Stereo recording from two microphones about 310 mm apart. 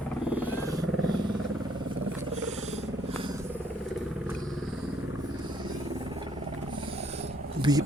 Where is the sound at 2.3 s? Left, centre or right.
Right.